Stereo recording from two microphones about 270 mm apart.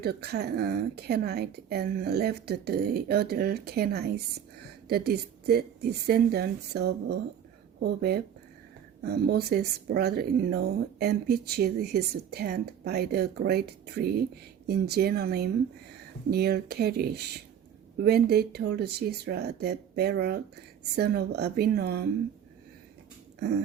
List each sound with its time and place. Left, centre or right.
0.0 s speech: right